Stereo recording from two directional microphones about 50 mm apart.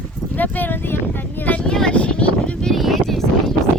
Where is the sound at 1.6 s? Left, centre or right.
Centre.